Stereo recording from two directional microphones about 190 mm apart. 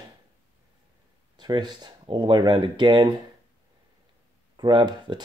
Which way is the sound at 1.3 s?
25° right (ahead or behind).